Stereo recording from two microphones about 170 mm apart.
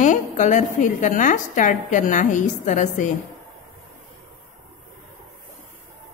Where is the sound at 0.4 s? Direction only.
45° left (ahead or behind).